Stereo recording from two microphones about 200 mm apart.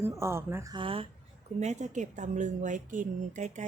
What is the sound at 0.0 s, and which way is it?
A woman's voice, 15° right (ahead or behind).